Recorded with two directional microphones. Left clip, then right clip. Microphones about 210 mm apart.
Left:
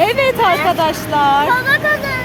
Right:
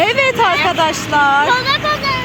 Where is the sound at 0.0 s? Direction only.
10° right (ahead or behind).